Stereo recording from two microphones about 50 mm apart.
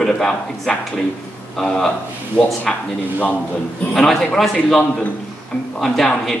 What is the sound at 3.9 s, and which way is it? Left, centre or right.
A man's voice, centre.